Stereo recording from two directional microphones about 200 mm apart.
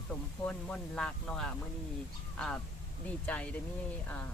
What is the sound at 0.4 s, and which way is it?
Speech, 5° left (ahead or behind).